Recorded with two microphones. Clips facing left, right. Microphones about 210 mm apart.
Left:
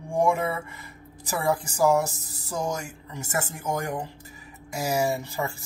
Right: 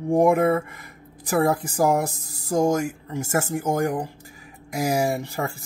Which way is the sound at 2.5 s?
55° right (ahead or behind).